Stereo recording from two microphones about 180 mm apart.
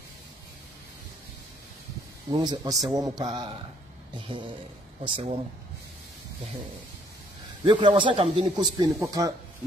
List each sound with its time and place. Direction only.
2.3 s a man's voice: 20° right (ahead or behind)
7.6 s a man's voice: 25° right (ahead or behind)